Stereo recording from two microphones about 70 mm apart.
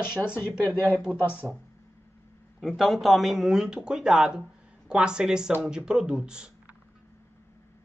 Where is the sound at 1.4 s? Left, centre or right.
Centre.